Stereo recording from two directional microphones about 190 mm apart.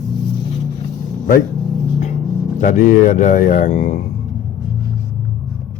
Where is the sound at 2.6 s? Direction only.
45° left (ahead or behind).